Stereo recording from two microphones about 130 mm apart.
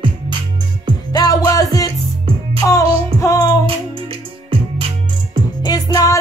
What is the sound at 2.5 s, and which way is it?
Child singing, 25° left (ahead or behind).